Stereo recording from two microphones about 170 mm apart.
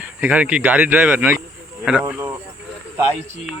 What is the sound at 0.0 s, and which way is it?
Speech, 10° right (ahead or behind).